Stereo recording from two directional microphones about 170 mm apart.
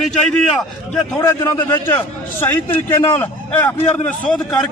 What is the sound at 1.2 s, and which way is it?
A man's voice, 20° left (ahead or behind).